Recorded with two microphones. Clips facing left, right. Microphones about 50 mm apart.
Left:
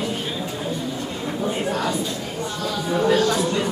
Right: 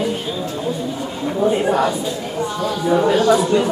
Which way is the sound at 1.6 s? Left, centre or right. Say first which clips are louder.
Right 7 dB; right.